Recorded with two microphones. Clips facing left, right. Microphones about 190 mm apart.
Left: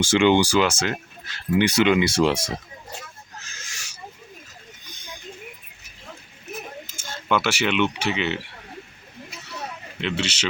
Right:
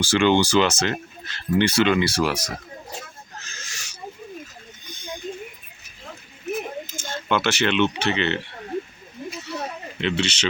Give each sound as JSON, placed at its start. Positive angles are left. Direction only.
{"t": 0.0, "sound": "speech", "side_deg": 20}
{"t": 3.4, "sound": "owl", "side_deg": 10}
{"t": 6.9, "sound": "speech", "side_deg": 10}
{"t": 10.0, "sound": "speech", "side_deg": 5}